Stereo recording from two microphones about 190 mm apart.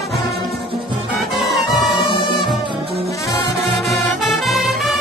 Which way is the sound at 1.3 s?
Centre (ahead or behind).